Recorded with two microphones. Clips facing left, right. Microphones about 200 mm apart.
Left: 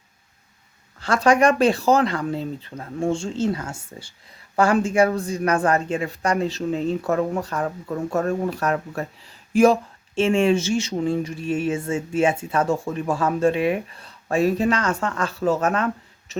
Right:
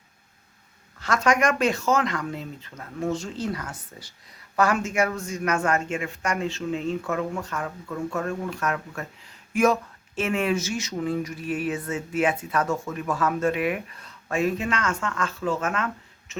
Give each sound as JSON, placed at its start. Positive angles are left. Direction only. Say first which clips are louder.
{"t": 0.9, "sound": "speech", "louder": "left 5 dB", "side_deg": 30}
{"t": 10.2, "sound": "a sound", "louder": "left 6 dB", "side_deg": 30}
{"t": 16.3, "sound": "speech", "louder": "left 5 dB", "side_deg": 35}